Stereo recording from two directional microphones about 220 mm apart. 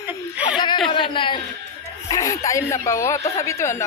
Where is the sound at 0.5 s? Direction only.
20° left (ahead or behind).